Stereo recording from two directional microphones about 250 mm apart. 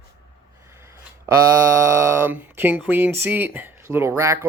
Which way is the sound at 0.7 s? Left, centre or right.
Centre.